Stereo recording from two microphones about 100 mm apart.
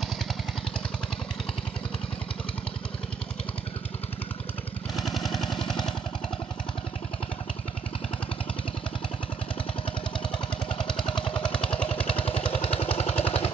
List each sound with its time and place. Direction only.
4.9 s a sound: centre (ahead or behind)
10.9 s vehicle: 5° left (ahead or behind)
12.1 s vehicle: 70° left (ahead or behind)
13.2 s vehicle: 70° left (ahead or behind)